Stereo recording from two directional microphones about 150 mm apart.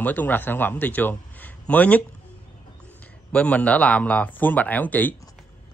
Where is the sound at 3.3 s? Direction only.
10° left (ahead or behind).